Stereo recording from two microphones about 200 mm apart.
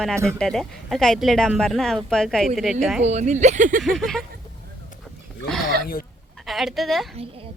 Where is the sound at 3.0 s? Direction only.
35° right (ahead or behind).